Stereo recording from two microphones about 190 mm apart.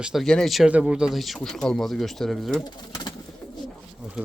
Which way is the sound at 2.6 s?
20° left (ahead or behind).